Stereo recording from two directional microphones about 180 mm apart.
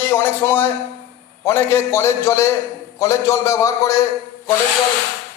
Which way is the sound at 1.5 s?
15° left (ahead or behind).